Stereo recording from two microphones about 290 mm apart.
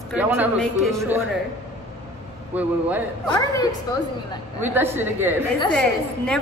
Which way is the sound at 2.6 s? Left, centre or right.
Centre.